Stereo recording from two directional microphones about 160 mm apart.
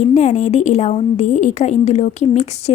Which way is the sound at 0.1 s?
45° left (ahead or behind).